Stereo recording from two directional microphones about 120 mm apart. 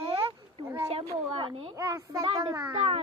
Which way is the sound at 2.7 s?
55° right (ahead or behind).